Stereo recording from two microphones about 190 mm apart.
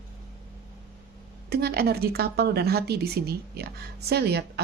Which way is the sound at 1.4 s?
55° right (ahead or behind).